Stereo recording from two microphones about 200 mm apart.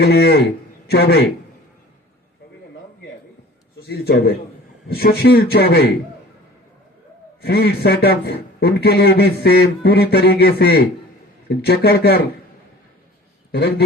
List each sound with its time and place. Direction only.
0.0 s a man's voice: 55° left (ahead or behind)
3.8 s a man's voice: 55° left (ahead or behind)
7.4 s a man's voice: 55° left (ahead or behind)
13.5 s a man's voice: 55° left (ahead or behind)